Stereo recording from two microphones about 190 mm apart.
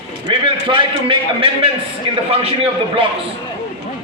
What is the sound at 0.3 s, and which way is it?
A man's voice, 25° right (ahead or behind).